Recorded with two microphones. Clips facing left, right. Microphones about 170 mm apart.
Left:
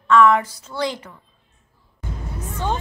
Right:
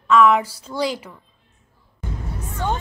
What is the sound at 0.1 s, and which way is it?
Speech, 10° right (ahead or behind).